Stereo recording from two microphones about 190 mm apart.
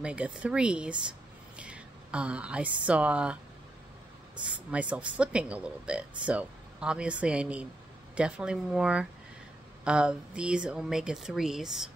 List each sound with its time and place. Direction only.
0.0 s speech: 5° right (ahead or behind)
4.4 s speech: 5° right (ahead or behind)